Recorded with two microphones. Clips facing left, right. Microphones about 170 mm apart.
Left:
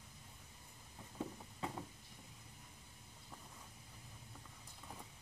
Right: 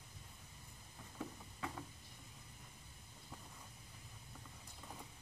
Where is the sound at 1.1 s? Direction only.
25° left (ahead or behind).